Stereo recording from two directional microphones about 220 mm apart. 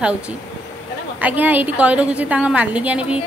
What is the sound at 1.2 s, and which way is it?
A woman's voice, 10° right (ahead or behind).